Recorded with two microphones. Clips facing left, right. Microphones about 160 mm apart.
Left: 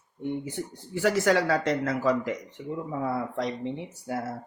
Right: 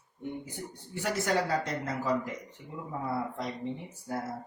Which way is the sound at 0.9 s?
90° left.